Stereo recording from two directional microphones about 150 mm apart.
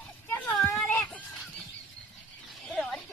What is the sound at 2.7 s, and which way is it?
Chicken, 5° left (ahead or behind).